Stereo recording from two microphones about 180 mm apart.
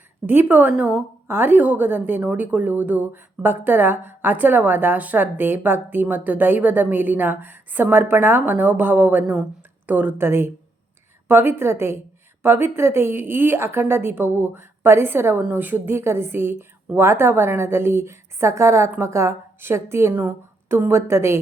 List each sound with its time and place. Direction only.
0.3 s a woman's voice: 10° right (ahead or behind)